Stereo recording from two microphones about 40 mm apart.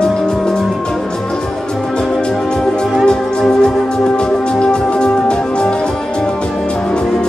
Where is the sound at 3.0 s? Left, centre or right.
Centre.